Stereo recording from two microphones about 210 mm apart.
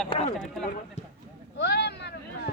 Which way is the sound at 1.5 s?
55° left (ahead or behind).